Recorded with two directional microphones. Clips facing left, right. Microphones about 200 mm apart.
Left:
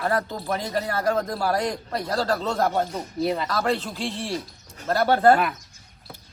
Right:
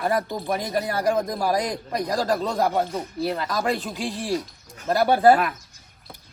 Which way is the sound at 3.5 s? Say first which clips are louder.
Even; 15° right (ahead or behind).